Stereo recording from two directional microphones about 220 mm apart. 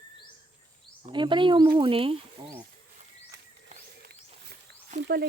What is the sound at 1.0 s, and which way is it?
Speech, 20° right (ahead or behind).